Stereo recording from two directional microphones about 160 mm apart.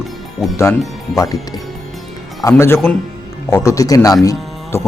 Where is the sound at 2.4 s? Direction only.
15° left (ahead or behind).